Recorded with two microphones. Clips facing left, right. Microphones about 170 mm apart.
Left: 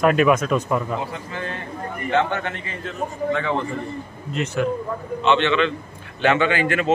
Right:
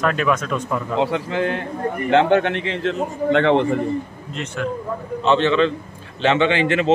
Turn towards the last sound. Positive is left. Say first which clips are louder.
# right 3 dB
turn(degrees=-25)  # may be behind; listen again after turning